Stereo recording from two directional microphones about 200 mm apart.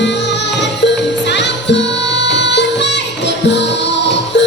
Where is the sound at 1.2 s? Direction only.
60° left (ahead or behind).